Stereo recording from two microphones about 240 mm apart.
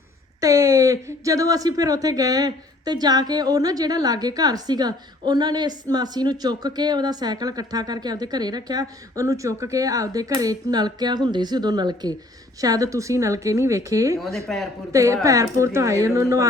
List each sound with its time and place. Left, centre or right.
0.4 s speech: centre
14.3 s speech: centre
14.9 s speech: centre